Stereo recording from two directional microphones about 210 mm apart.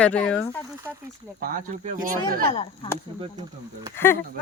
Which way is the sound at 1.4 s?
40° right (ahead or behind).